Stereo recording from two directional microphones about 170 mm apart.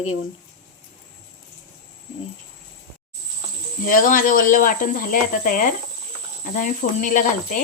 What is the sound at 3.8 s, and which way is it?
Speech, 50° left (ahead or behind).